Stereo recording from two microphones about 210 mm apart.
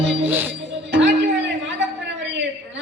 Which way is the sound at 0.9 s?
60° right (ahead or behind).